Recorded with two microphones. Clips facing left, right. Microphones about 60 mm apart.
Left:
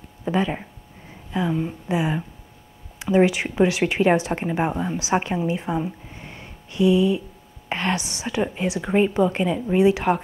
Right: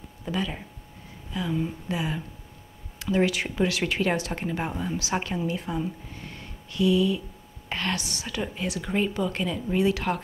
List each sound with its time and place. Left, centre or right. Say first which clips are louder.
0.2 s speech: left 7 dB; left